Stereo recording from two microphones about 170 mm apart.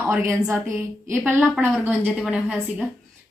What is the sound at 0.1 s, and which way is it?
A woman's voice, 15° right (ahead or behind).